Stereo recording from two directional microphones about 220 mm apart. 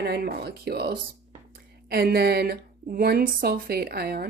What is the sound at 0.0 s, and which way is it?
Speech, 45° right (ahead or behind).